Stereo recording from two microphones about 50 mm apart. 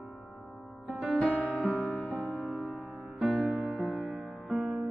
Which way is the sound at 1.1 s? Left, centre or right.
Left.